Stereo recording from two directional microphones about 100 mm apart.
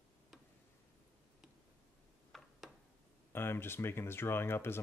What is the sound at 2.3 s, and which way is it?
Tick-tock, 5° left (ahead or behind).